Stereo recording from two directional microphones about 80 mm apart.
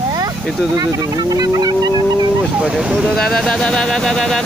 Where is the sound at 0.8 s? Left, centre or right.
Right.